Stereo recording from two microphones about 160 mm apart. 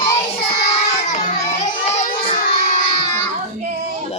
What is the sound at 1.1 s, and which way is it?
Children playing, 45° left (ahead or behind).